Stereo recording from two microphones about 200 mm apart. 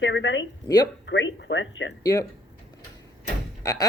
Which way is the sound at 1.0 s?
65° left (ahead or behind).